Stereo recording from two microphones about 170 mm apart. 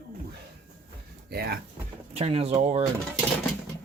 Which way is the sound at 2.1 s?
35° right (ahead or behind).